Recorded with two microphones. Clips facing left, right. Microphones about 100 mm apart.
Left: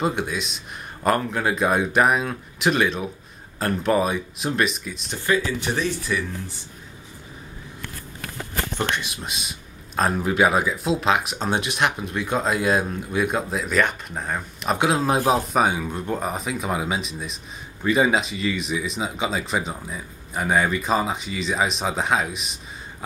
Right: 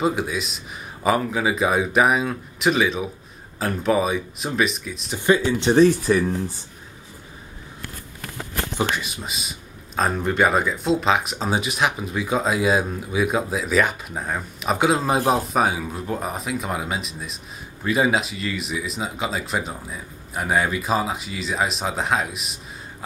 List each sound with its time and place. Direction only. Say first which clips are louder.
0.0 s speech: right 2 dB; centre (ahead or behind)
5.2 s speech: right 4 dB; 25° right (ahead or behind)
5.8 s speech: right 10 dB; 40° right (ahead or behind)
8.7 s speech: right 3 dB; centre (ahead or behind)